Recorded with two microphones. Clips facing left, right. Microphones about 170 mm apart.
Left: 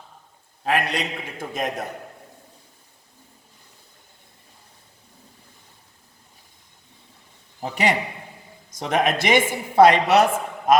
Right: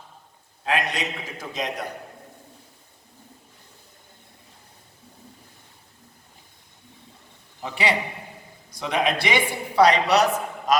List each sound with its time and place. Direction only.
0.7 s a man's voice: 60° left (ahead or behind)
7.6 s a woman's voice: 45° left (ahead or behind)